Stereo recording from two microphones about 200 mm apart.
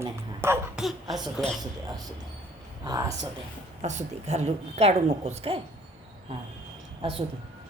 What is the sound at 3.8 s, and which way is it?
A woman's voice, 35° right (ahead or behind).